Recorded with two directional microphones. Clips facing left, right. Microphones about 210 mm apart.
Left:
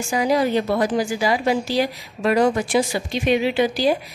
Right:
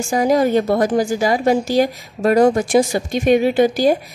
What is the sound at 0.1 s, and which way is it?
A woman's voice, 45° right (ahead or behind).